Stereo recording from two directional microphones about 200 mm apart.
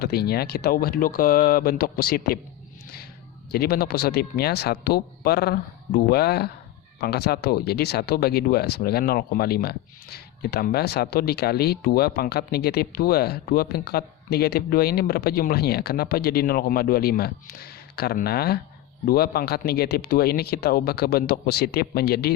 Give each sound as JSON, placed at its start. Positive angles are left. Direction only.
{"t": 0.0, "sound": "speech", "side_deg": 50}
{"t": 3.5, "sound": "speech", "side_deg": 50}